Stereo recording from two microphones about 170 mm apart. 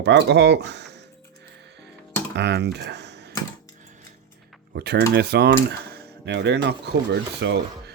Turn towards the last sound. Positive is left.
turn(degrees=-90)